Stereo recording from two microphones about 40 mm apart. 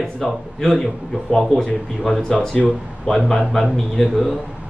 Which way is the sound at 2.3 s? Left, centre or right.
Right.